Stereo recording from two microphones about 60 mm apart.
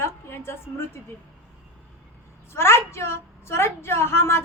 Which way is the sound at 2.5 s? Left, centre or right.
Left.